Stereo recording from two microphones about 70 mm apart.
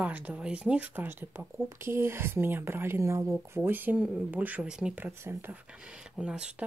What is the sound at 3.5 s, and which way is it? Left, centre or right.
Speech, right.